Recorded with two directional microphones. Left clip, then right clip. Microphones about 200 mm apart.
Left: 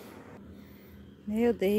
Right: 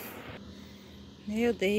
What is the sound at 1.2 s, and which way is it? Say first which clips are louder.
Speech: left 1 dB; 15° left (ahead or behind).